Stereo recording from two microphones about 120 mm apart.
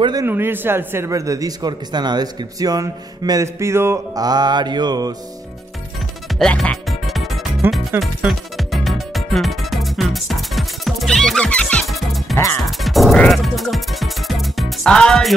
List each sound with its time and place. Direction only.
0.0 s speech: 35° right (ahead or behind)
0.3 s speech: 20° right (ahead or behind); by 5.1 s 35° right (ahead or behind)
6.3 s music: 5° left (ahead or behind)
7.6 s music: 20° right (ahead or behind)
8.0 s music: centre (ahead or behind)